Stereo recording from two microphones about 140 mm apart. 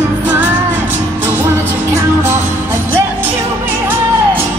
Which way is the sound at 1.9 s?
15° right (ahead or behind).